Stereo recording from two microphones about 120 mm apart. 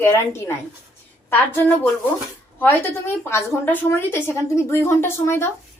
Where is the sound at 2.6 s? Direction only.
20° left (ahead or behind).